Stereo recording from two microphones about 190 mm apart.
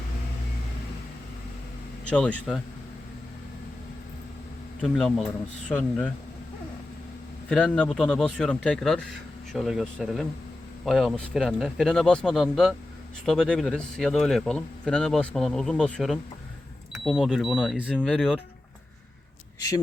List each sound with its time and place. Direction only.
2.0 s speech: 5° left (ahead or behind)
4.8 s speech: centre (ahead or behind)
7.5 s speech: 5° left (ahead or behind)
19.5 s speech: 20° left (ahead or behind)